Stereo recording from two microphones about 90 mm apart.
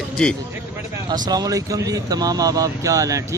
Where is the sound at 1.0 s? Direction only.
50° right (ahead or behind).